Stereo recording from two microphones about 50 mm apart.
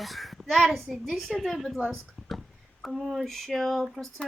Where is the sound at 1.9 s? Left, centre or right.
Centre.